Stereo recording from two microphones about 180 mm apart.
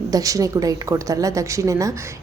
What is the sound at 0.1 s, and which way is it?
A woman's voice, 20° right (ahead or behind).